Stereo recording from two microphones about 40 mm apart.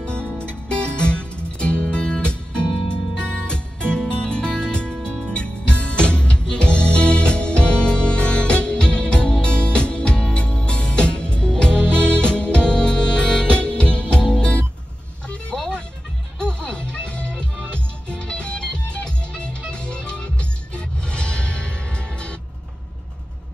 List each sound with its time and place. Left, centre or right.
0.0 s music: left
13.5 s music: left
15.5 s music: centre